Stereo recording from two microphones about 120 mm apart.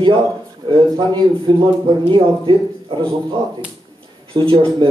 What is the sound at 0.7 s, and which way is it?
A man's voice, 40° right (ahead or behind).